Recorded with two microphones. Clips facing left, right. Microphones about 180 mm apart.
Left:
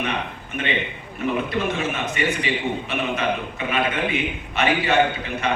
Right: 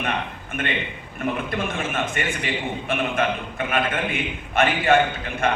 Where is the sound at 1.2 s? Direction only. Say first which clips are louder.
Left 2 dB; 50° right (ahead or behind).